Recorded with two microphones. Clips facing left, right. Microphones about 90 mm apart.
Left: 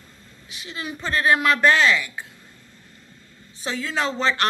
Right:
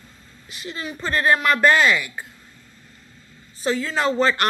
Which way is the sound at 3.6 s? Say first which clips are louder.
Right 4 dB; centre (ahead or behind).